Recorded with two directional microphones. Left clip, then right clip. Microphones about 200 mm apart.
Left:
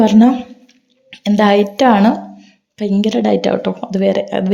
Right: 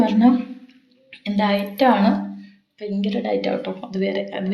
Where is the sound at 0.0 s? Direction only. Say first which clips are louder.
Left 6 dB; 45° left (ahead or behind).